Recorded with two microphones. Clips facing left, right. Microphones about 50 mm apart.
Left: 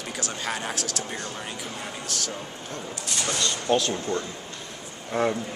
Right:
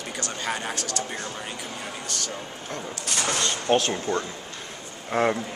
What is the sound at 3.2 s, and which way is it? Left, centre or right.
A man's voice, right.